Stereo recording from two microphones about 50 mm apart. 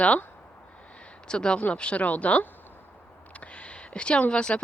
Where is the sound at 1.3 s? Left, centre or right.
Centre.